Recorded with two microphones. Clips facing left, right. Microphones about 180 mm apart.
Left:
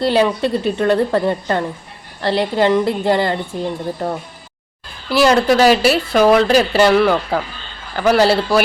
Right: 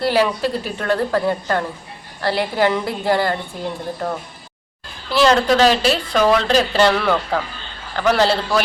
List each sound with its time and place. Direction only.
0.0 s a woman's voice: 20° left (ahead or behind)
5.1 s a woman's voice: 10° left (ahead or behind)